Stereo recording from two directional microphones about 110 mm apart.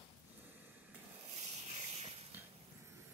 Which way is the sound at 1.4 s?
85° right.